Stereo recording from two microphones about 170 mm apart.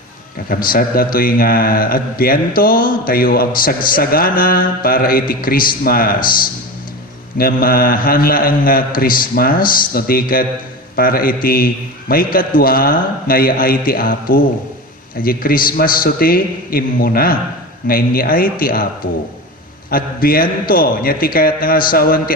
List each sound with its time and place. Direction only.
0.4 s speech: 55° left (ahead or behind)
7.3 s speech: 60° left (ahead or behind)
19.9 s speech: 60° left (ahead or behind)